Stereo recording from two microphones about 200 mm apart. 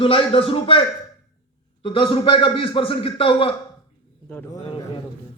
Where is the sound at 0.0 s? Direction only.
25° left (ahead or behind).